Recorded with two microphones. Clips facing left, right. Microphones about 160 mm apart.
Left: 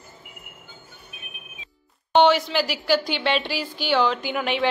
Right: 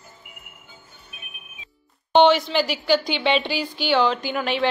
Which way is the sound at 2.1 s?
5° left (ahead or behind).